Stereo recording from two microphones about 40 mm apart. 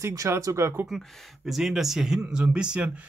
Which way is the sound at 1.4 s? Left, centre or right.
Centre.